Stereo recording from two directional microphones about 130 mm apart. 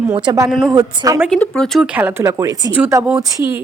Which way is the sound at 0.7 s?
25° right (ahead or behind).